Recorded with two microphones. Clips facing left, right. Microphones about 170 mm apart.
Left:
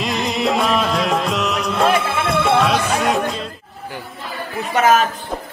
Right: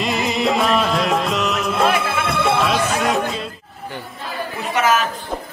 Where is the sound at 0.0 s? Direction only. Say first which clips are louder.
Even; centre (ahead or behind).